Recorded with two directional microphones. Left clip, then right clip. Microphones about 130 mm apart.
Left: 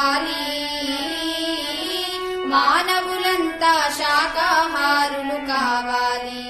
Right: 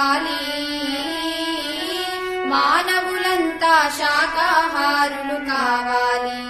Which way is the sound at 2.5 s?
25° right (ahead or behind).